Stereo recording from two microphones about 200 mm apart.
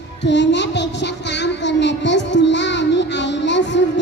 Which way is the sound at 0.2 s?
60° left (ahead or behind).